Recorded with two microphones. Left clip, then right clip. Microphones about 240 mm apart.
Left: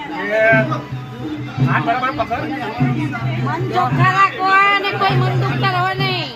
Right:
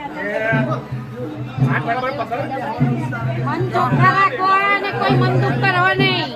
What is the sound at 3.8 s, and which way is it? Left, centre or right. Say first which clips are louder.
Speech: left 1 dB; left.